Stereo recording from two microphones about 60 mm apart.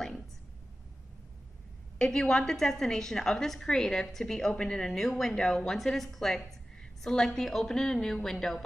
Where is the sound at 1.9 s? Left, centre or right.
Centre.